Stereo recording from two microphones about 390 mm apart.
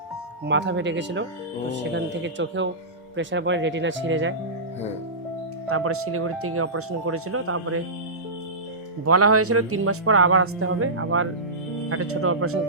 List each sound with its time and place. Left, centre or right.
0.4 s speech: right
5.6 s speech: right
9.0 s speech: right